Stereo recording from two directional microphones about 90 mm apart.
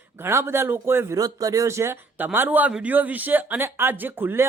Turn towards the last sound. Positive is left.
turn(degrees=-25)  # may be behind; listen again after turning